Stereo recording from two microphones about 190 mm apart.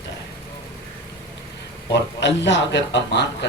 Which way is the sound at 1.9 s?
70° left (ahead or behind).